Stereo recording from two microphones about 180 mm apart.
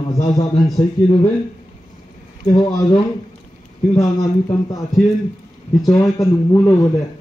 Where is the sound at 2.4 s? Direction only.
20° left (ahead or behind).